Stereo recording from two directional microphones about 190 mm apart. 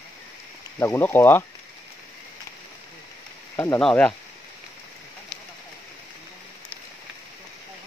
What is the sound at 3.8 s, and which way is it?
Speech, 5° left (ahead or behind).